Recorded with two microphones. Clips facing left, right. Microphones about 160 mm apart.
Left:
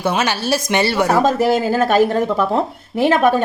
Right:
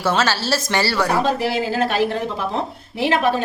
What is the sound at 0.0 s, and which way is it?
A woman's voice, 15° left (ahead or behind).